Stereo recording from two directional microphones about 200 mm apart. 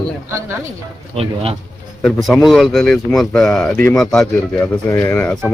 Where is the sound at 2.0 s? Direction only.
Centre (ahead or behind).